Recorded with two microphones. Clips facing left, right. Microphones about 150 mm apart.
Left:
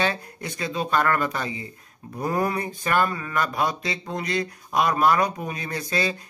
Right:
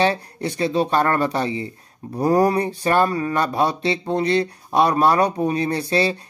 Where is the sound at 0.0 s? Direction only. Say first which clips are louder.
Right 6 dB; 30° right (ahead or behind).